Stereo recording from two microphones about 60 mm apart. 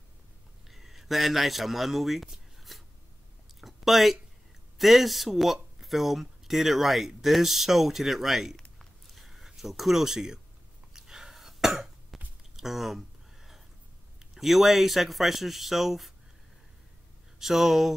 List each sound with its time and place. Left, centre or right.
0.7 s speech: centre
2.7 s writing: centre
3.6 s speech: centre
8.5 s a sound: centre
10.9 s cough: centre
12.5 s a sound: centre
14.3 s speech: centre
17.4 s speech: centre